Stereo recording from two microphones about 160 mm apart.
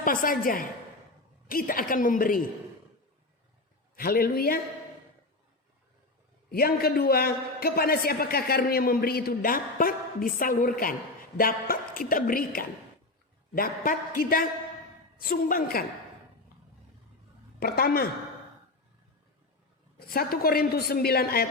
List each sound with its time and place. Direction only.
0.0 s a woman's voice: 60° left (ahead or behind)
3.9 s a man's voice: 65° left (ahead or behind)
6.5 s a man's voice: 70° left (ahead or behind)
17.6 s a man's voice: 70° left (ahead or behind)
20.0 s a man's voice: 70° left (ahead or behind)